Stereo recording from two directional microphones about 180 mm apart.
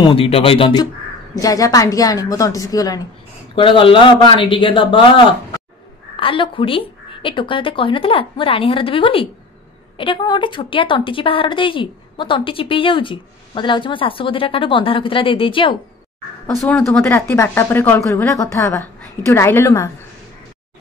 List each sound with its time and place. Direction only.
0.0 s speech: 30° left (ahead or behind)
1.3 s a woman's voice: 20° left (ahead or behind)
16.5 s speech: 5° left (ahead or behind)